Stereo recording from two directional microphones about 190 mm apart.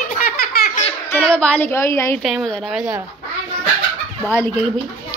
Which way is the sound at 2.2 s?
Centre (ahead or behind).